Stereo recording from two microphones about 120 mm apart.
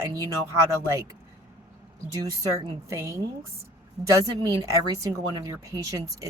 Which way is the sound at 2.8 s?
25° right (ahead or behind).